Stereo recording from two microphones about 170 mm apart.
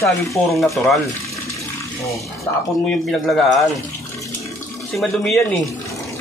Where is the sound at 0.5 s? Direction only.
Centre (ahead or behind).